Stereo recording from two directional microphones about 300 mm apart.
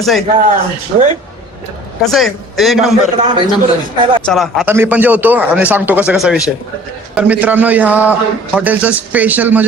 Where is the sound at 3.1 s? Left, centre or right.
Centre.